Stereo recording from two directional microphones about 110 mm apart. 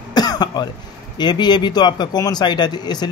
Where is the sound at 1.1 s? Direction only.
40° left (ahead or behind).